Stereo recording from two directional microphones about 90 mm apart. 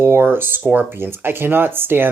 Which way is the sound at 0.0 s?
25° right (ahead or behind).